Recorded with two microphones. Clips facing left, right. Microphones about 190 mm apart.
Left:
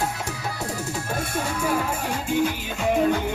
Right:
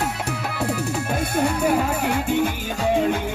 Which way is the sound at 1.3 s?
60° right (ahead or behind).